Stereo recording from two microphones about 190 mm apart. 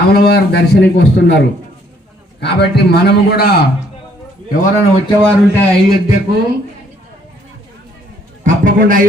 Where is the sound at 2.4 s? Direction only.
60° left (ahead or behind).